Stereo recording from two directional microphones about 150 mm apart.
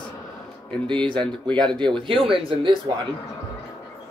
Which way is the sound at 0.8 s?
35° right (ahead or behind).